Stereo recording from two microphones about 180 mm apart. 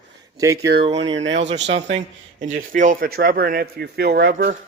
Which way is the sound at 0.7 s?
55° right (ahead or behind).